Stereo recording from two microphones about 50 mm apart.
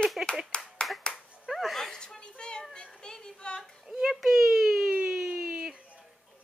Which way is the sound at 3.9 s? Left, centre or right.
Centre.